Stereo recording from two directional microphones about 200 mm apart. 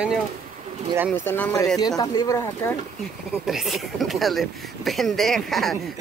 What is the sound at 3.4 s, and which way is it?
Speech, centre (ahead or behind).